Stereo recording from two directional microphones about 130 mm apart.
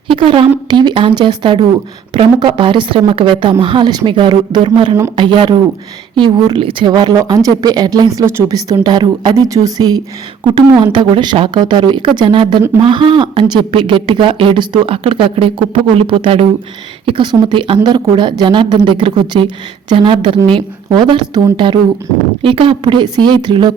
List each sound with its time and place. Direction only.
0.1 s a woman's voice: 45° right (ahead or behind)